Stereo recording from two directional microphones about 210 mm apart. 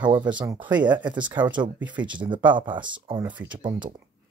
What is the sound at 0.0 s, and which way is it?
Speech, 20° right (ahead or behind).